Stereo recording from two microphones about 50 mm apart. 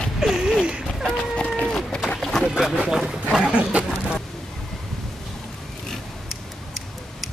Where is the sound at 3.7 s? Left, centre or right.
Right.